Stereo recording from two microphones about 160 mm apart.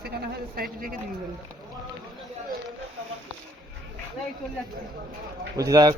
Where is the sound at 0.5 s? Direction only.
65° right (ahead or behind).